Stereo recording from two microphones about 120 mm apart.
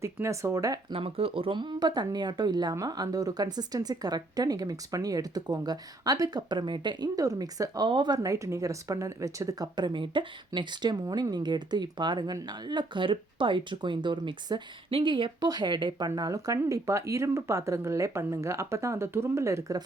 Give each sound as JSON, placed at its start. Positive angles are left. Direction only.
{"t": 0.0, "sound": "speech", "side_deg": -25}
{"t": 0.9, "sound": "speech", "side_deg": -50}